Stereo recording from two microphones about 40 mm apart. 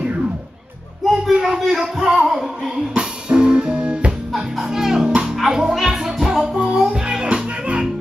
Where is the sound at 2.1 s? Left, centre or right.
Centre.